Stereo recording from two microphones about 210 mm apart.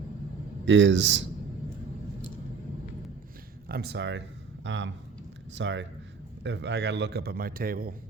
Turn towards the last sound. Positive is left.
turn(degrees=-45)  # may be behind; listen again after turning